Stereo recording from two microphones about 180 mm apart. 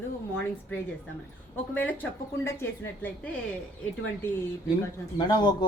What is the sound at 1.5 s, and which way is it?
Speech, 10° left (ahead or behind).